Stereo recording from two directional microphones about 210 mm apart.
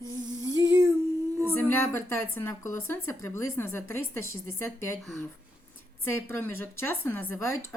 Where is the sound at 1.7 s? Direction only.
10° left (ahead or behind).